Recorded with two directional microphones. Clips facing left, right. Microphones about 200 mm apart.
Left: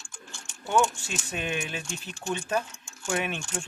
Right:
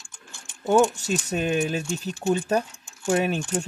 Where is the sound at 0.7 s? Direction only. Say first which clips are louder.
Right 6 dB; 40° right (ahead or behind).